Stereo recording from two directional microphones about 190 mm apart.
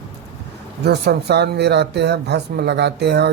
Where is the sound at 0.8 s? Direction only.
60° right (ahead or behind).